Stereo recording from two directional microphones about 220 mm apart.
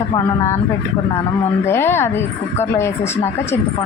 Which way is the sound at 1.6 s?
10° left (ahead or behind).